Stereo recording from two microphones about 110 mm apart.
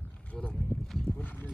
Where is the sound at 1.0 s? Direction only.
15° left (ahead or behind).